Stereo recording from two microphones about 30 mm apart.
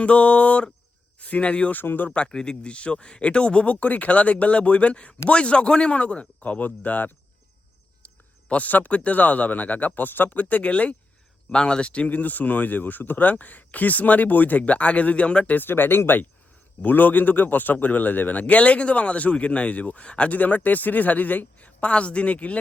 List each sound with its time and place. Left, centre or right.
0.0 s speech: left
1.7 s speech: left
2.0 s speech: left
2.3 s speech: left
3.7 s speech: left
6.6 s speech: left
8.0 s a sound: left
8.9 s speech: left
10.6 s speech: left
11.4 s speech: left
12.1 s speech: left
16.8 s speech: left
20.3 s a man's voice: left
21.8 s speech: left